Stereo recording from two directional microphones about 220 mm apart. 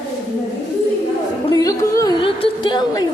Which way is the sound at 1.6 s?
15° left (ahead or behind).